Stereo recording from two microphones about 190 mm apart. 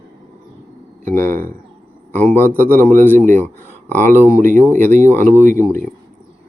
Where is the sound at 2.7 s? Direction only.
10° left (ahead or behind).